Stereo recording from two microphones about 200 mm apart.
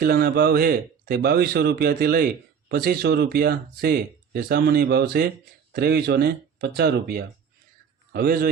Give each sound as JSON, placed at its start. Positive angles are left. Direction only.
{"t": 0.0, "sound": "speech", "side_deg": -50}